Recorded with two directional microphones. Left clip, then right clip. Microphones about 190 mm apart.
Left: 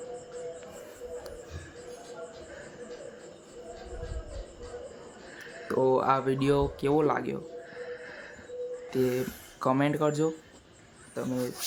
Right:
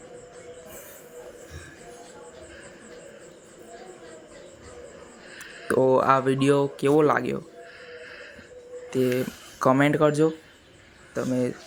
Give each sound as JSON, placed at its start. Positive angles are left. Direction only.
{"t": 5.6, "sound": "speech", "side_deg": -20}
{"t": 7.8, "sound": "horse", "side_deg": 30}
{"t": 8.9, "sound": "speech", "side_deg": -15}